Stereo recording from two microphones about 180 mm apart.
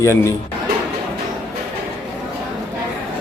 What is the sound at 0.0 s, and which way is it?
Speech, 15° left (ahead or behind).